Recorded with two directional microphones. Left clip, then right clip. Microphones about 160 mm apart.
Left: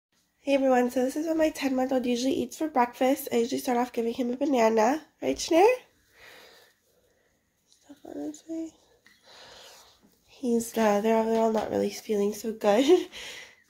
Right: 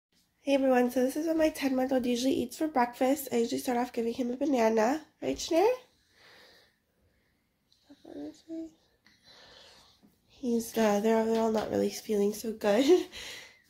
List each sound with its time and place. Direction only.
0.4 s speech: 5° left (ahead or behind)
5.3 s speech: 35° left (ahead or behind)
9.3 s a sound: 45° left (ahead or behind)
10.4 s speech: 25° left (ahead or behind)